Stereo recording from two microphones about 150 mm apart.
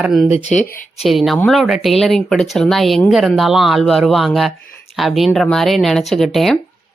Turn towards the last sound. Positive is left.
turn(degrees=0)  # may be behind; listen again after turning